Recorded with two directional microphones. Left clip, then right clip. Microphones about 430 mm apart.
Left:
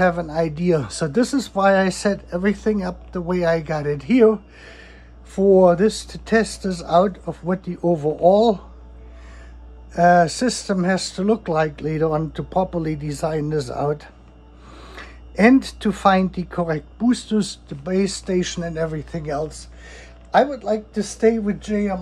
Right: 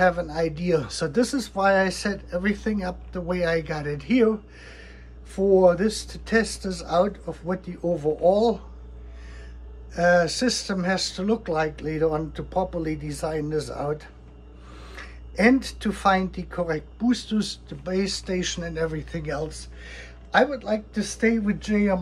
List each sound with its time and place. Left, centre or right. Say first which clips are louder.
0.0 s speech: left 2 dB; centre
9.9 s speech: left 5 dB; centre